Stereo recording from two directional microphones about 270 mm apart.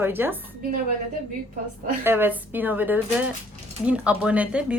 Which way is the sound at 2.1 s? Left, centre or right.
Centre.